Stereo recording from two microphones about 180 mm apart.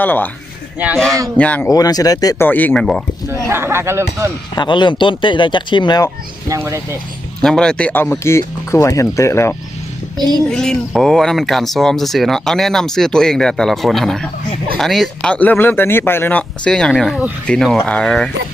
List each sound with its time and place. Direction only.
0.0 s speech: 10° left (ahead or behind)
1.4 s speech: 10° left (ahead or behind)
1.7 s speech: 20° left (ahead or behind)
2.5 s speech: 10° left (ahead or behind)
3.5 s speech: 15° right (ahead or behind)
4.5 s speech: 25° left (ahead or behind)
6.5 s speech: 15° right (ahead or behind)
7.4 s speech: 5° left (ahead or behind)
10.2 s a child's voice: 20° right (ahead or behind)
10.5 s speech: 5° left (ahead or behind)